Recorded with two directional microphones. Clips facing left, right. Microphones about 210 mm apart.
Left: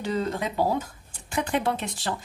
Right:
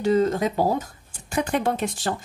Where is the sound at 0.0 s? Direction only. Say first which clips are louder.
Right 7 dB; 45° right (ahead or behind).